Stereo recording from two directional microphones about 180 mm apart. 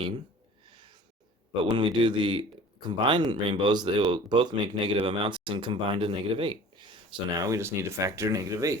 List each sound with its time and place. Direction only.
1.6 s speech: 25° right (ahead or behind)